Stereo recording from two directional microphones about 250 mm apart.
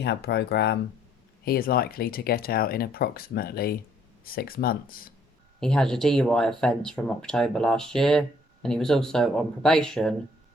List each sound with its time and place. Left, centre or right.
0.0 s speech: left
5.5 s speech: centre